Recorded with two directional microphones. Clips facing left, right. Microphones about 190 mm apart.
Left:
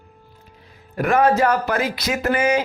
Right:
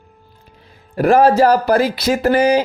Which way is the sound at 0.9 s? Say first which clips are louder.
Right 5 dB; 35° right (ahead or behind).